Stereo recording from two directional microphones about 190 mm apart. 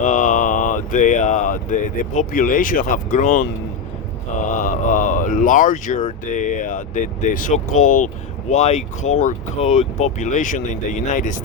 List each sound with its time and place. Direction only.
0.0 s speech: 40° left (ahead or behind)
4.4 s a sound: 40° left (ahead or behind)
6.2 s speech: 40° left (ahead or behind)